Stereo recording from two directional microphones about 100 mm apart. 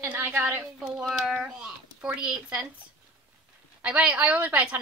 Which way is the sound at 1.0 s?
5° right (ahead or behind).